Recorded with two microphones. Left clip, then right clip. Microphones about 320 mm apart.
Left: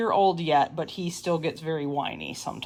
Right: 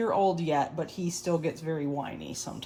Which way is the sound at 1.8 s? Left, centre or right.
Left.